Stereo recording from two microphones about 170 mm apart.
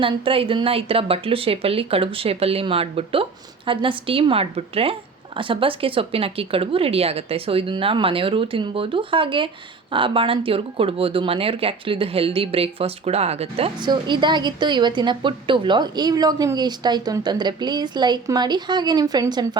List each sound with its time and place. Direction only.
0.0 s a woman's voice: 30° right (ahead or behind)